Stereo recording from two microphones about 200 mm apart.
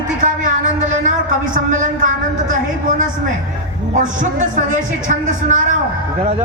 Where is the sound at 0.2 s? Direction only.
40° right (ahead or behind).